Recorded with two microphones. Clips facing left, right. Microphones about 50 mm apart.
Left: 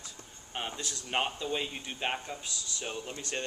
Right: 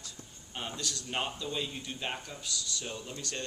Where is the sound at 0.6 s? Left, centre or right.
Left.